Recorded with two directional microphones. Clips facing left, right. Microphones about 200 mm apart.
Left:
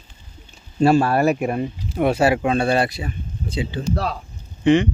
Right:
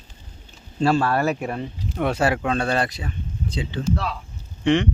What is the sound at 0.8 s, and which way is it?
Speech, 10° left (ahead or behind).